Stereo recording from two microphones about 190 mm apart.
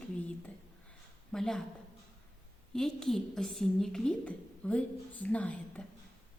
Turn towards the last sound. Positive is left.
turn(degrees=5)  # may be behind; listen again after turning